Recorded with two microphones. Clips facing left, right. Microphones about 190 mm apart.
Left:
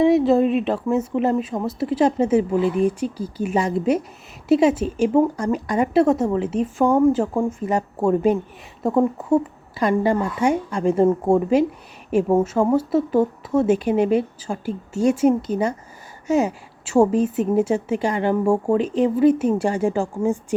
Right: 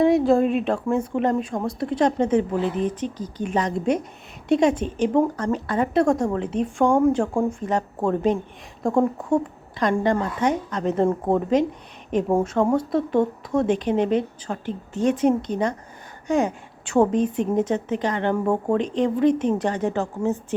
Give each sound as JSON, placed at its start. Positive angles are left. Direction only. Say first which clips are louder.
{"t": 0.0, "sound": "a woman's voice", "louder": "left 2 dB", "side_deg": 0}